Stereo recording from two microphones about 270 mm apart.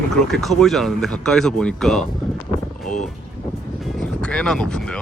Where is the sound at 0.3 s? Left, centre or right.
Centre.